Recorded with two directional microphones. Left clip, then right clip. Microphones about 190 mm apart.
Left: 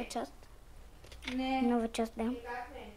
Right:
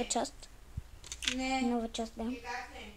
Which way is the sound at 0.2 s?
35° right (ahead or behind).